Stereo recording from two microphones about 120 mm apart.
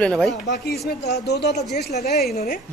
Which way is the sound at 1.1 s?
70° left (ahead or behind).